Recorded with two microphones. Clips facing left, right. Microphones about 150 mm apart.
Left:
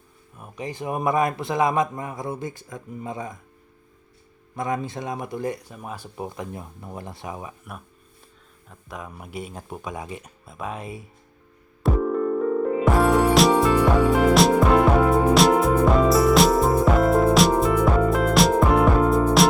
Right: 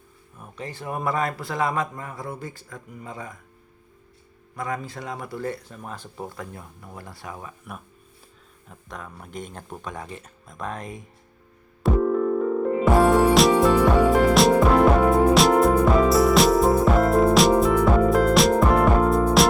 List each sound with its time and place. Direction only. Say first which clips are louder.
0.3 s a man's voice: left 4 dB; 10° left (ahead or behind)
4.5 s a man's voice: left 4 dB; 20° left (ahead or behind)
8.7 s speech: left 2 dB; 5° left (ahead or behind)
11.8 s music: right 2 dB; centre (ahead or behind)